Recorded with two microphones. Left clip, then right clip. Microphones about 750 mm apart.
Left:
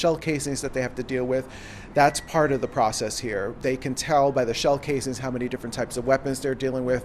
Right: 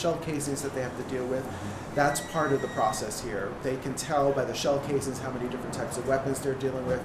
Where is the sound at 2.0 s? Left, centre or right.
Left.